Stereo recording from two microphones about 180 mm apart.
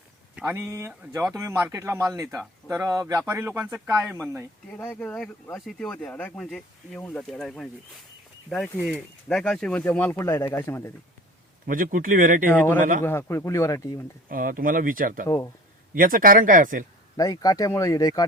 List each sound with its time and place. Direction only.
0.3 s speech: 10° right (ahead or behind)
4.8 s speech: 10° left (ahead or behind)
11.6 s speech: 50° right (ahead or behind)
12.5 s speech: 10° left (ahead or behind)
12.8 s speech: 45° right (ahead or behind)
13.1 s speech: 15° left (ahead or behind)
14.3 s speech: 50° right (ahead or behind)
17.2 s speech: 20° left (ahead or behind)